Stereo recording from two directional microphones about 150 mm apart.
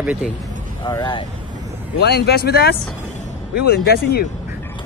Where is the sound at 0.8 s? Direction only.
30° left (ahead or behind).